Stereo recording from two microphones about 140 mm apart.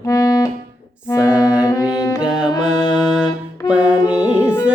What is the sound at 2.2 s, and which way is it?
Music, 5° right (ahead or behind).